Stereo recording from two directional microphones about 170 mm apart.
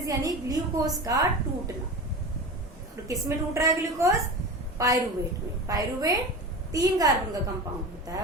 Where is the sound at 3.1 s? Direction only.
15° right (ahead or behind).